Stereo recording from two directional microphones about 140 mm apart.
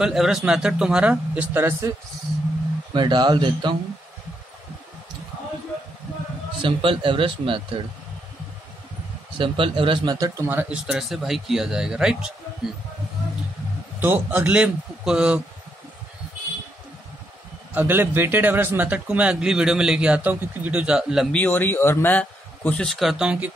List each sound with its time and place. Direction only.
0.0 s a man's voice: 5° right (ahead or behind); by 1.9 s 20° right (ahead or behind)
2.9 s speech: 35° right (ahead or behind)
6.6 s speech: 40° right (ahead or behind)
9.4 s speech: 40° right (ahead or behind)
10.1 s speech: 25° right (ahead or behind); by 12.3 s 5° right (ahead or behind)
13.9 s a man's voice: 15° right (ahead or behind)
17.7 s a man's voice: 15° right (ahead or behind)
21.3 s a man's voice: 10° left (ahead or behind)
22.8 s speech: centre (ahead or behind)